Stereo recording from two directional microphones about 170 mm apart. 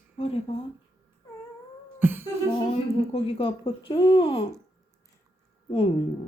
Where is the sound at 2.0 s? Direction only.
10° right (ahead or behind).